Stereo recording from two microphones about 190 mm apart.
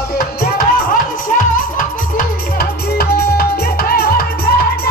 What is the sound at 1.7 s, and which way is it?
Music, 50° left (ahead or behind).